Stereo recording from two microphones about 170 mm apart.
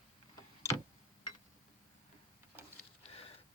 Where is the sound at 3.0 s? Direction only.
35° left (ahead or behind).